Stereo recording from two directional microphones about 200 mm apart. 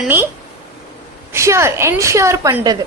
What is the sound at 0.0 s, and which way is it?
Speech, 10° right (ahead or behind).